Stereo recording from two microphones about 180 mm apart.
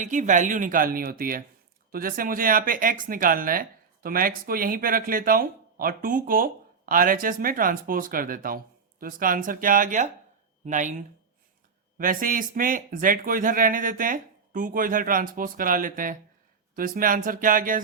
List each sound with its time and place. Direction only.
0.0 s speech: 45° right (ahead or behind)
11.9 s speech: 50° right (ahead or behind)